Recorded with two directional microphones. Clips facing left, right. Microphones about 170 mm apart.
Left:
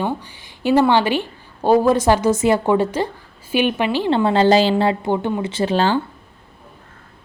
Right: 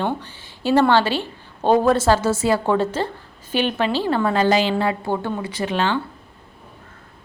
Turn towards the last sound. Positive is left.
turn(degrees=35)  # may be behind; listen again after turning